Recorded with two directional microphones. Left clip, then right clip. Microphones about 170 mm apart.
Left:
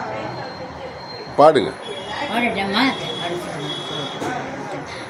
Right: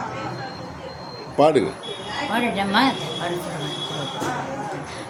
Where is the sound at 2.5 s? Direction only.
30° right (ahead or behind).